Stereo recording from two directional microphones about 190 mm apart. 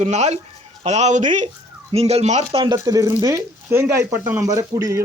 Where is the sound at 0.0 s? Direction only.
35° right (ahead or behind).